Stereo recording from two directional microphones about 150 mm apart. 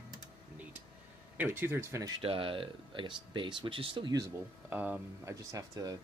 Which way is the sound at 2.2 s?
35° right (ahead or behind).